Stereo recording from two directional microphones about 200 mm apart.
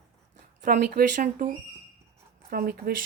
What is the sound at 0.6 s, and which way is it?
Speech, 50° right (ahead or behind).